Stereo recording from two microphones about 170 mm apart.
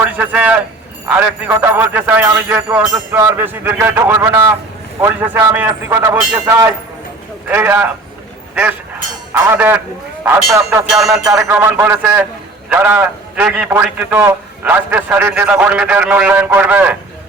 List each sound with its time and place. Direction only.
0.0 s a man's voice: 10° right (ahead or behind)
9.3 s a man's voice: 10° right (ahead or behind)
10.8 s music: 5° right (ahead or behind)
11.3 s a man's voice: 20° right (ahead or behind)